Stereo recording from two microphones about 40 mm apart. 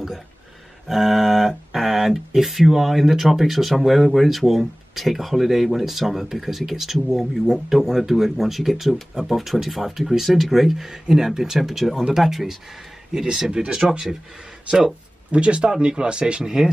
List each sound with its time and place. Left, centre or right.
0.8 s speech: centre
13.1 s speech: centre
13.5 s speech: right
13.7 s speech: centre
15.3 s speech: right